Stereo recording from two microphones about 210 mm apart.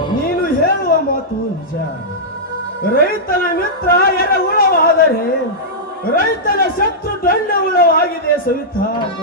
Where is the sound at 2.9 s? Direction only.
45° left (ahead or behind).